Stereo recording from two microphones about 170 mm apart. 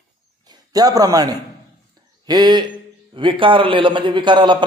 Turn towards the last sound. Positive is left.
turn(degrees=-30)  # may be behind; listen again after turning